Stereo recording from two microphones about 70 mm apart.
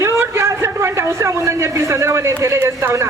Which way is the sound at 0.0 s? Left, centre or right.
Right.